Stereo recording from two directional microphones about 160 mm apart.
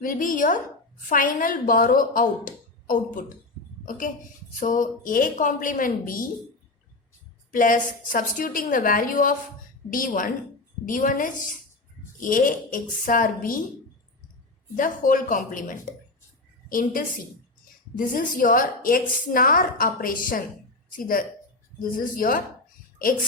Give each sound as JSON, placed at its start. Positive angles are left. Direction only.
{"t": 0.0, "sound": "a woman's voice", "side_deg": 60}
{"t": 7.5, "sound": "a woman's voice", "side_deg": 55}
{"t": 14.8, "sound": "a woman's voice", "side_deg": 55}
{"t": 16.6, "sound": "a woman's voice", "side_deg": 60}